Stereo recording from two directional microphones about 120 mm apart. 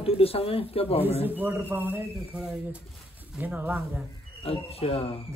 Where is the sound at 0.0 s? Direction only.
55° left (ahead or behind).